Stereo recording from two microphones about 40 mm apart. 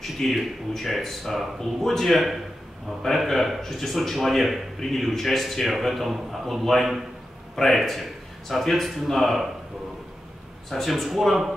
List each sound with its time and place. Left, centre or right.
0.0 s a man's voice: centre
10.7 s a man's voice: centre